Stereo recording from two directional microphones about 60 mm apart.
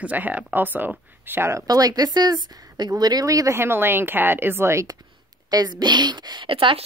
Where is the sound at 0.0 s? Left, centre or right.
Right.